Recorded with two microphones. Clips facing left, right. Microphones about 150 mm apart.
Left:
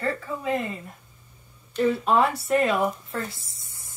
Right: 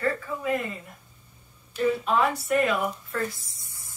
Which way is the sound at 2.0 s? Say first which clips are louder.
Left 2 dB; 35° left (ahead or behind).